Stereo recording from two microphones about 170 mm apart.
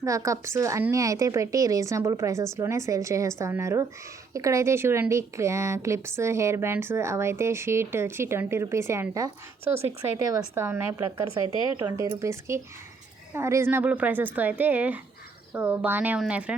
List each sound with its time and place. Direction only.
0.0 s a woman's voice: 20° right (ahead or behind)